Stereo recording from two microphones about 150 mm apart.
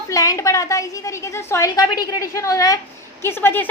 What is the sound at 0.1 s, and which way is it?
A woman's voice, 20° left (ahead or behind).